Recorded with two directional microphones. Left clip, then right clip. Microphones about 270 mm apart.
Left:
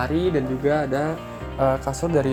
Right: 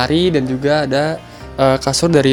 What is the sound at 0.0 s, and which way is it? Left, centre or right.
Speech, right.